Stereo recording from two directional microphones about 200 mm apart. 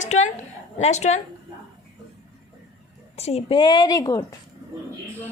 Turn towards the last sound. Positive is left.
turn(degrees=15)  # may be behind; listen again after turning